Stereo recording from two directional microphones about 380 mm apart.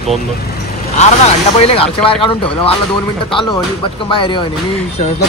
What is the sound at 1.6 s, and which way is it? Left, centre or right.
Speech, centre.